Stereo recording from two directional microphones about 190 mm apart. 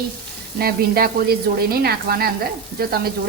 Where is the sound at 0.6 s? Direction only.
55° right (ahead or behind).